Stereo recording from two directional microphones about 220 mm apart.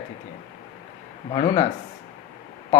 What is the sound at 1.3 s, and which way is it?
Speech, 20° left (ahead or behind).